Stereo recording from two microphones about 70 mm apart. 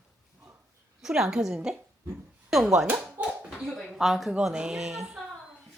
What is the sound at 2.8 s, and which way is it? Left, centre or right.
Speech, right.